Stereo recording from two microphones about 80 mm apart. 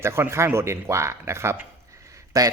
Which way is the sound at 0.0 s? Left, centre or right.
Right.